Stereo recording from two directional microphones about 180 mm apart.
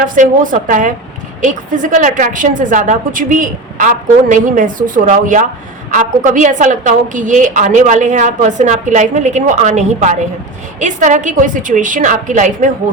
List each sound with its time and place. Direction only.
0.0 s a woman's voice: 50° right (ahead or behind)